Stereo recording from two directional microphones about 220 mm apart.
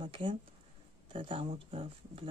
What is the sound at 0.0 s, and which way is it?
Speech, 25° right (ahead or behind).